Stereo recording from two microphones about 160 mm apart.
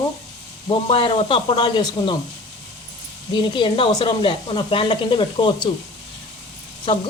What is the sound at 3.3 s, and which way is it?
Speech, 30° left (ahead or behind).